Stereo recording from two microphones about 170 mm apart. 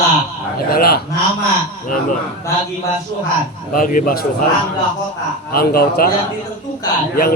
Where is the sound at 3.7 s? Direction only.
55° left (ahead or behind).